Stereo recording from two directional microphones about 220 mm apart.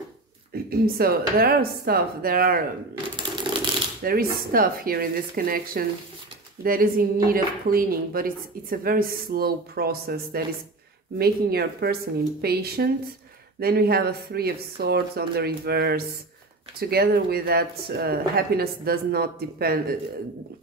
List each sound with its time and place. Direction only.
0.7 s speech: 40° right (ahead or behind)
4.0 s a woman's voice: 45° right (ahead or behind)